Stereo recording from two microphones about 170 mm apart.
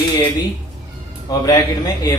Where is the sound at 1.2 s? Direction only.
20° left (ahead or behind).